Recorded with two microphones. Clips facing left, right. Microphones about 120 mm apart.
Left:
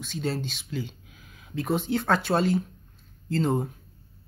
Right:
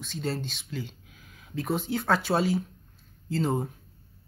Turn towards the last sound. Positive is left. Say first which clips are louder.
# left 2 dB
turn(degrees=0)  # may be behind; listen again after turning